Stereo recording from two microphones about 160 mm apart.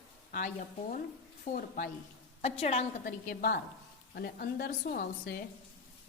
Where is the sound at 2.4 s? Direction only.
40° left (ahead or behind).